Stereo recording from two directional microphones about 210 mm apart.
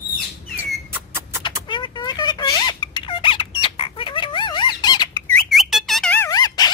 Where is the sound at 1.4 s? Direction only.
20° left (ahead or behind).